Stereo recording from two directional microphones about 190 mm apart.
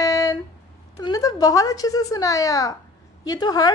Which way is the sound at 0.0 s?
15° left (ahead or behind).